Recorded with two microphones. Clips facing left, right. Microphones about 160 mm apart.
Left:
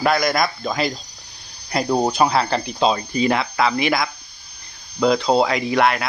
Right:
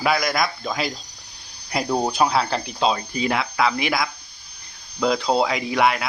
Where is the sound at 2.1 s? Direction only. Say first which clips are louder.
Left 2 dB; 5° right (ahead or behind).